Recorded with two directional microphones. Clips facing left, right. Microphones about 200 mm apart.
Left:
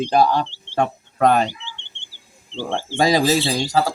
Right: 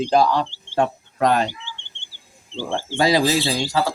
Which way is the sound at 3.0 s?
45° left (ahead or behind).